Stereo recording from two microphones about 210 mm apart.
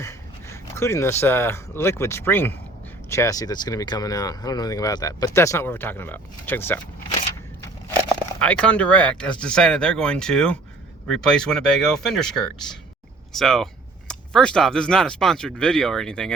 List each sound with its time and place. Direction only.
0.0 s speech: 15° left (ahead or behind)
8.4 s speech: 5° left (ahead or behind)